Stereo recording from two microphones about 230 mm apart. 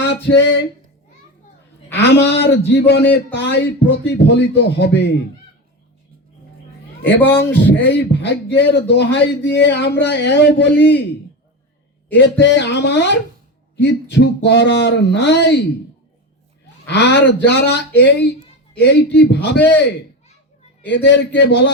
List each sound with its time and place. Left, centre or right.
1.9 s a man's voice: left
7.0 s speech: centre
7.6 s a man's voice: left
12.1 s a man's voice: left
16.8 s a man's voice: left
20.8 s a man's voice: left